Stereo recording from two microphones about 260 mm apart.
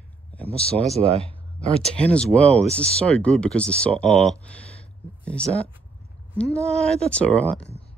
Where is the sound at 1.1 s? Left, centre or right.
Right.